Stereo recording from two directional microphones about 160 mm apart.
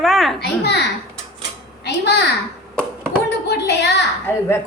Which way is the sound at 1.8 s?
90° left.